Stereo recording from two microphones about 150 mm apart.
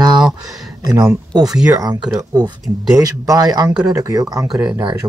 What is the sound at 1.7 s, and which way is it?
Speech, 25° right (ahead or behind).